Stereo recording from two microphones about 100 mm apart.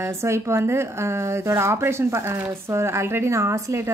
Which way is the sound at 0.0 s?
25° right (ahead or behind).